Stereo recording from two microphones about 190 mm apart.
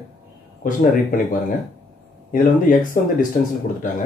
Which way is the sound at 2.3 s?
45° left (ahead or behind).